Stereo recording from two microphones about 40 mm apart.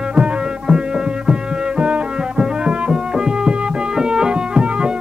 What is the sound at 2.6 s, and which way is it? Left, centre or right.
Music, right.